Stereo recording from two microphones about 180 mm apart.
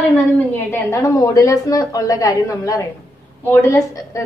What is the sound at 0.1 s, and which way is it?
A woman's voice, 10° left (ahead or behind).